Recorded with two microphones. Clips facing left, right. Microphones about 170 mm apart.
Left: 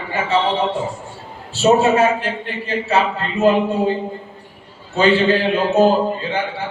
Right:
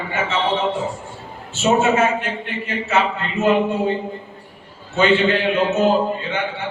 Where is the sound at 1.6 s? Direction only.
35° left (ahead or behind).